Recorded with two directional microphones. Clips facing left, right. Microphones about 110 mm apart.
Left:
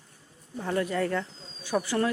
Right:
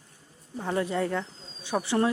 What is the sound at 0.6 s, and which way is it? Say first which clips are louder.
Speech: even; 15° right (ahead or behind).